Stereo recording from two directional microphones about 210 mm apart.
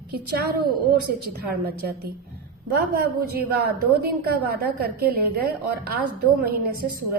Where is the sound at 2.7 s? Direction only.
45° right (ahead or behind).